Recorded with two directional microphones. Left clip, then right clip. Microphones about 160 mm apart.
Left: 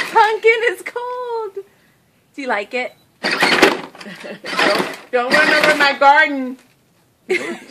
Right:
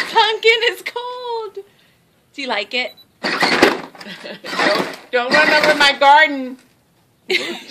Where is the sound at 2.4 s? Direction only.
30° left (ahead or behind).